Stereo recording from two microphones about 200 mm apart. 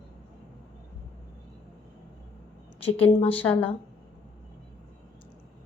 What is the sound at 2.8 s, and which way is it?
Speech, 30° left (ahead or behind).